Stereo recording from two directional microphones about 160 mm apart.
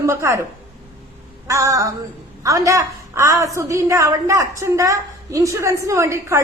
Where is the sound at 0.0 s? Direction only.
15° right (ahead or behind).